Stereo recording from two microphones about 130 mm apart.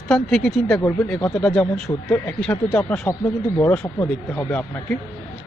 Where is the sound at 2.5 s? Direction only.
20° left (ahead or behind).